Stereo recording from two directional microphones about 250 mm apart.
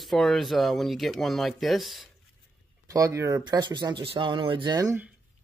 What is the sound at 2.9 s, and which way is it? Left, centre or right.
Speech, centre.